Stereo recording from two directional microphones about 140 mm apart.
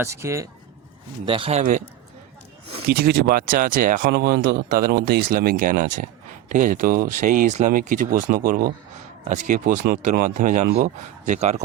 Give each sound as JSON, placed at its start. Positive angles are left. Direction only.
{"t": 0.0, "sound": "speech", "side_deg": -20}
{"t": 1.2, "sound": "a man's voice", "side_deg": -40}
{"t": 2.9, "sound": "speech", "side_deg": -90}
{"t": 9.3, "sound": "speech", "side_deg": -65}
{"t": 11.3, "sound": "speech", "side_deg": -50}